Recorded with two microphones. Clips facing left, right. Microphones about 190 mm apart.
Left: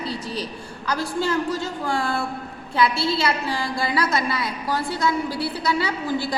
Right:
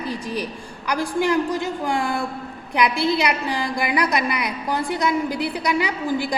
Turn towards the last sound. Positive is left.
turn(degrees=-15)  # may be behind; listen again after turning